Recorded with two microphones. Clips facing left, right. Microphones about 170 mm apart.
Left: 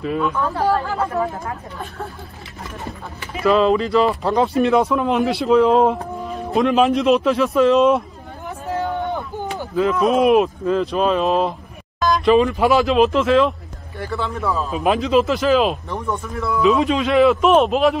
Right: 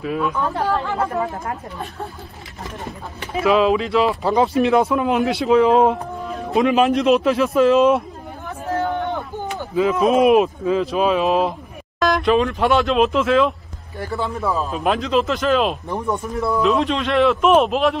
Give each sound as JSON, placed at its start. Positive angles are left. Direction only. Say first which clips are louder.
{"t": 0.0, "sound": "speech", "louder": "left 1 dB", "side_deg": 0}
{"t": 0.4, "sound": "speech", "louder": "left 1 dB", "side_deg": -15}
{"t": 0.7, "sound": "speech", "louder": "left 2 dB", "side_deg": 5}
{"t": 3.4, "sound": "speech", "louder": "left 1 dB", "side_deg": 0}
{"t": 8.5, "sound": "a sound", "louder": "right 1 dB", "side_deg": 15}
{"t": 9.8, "sound": "speech", "louder": "right 1 dB", "side_deg": 0}
{"t": 15.9, "sound": "speech", "louder": "right 2 dB", "side_deg": -15}
{"t": 16.6, "sound": "speech", "louder": "left 5 dB", "side_deg": 0}